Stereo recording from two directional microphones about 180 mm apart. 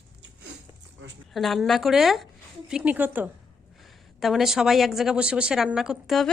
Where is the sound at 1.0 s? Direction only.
90° right.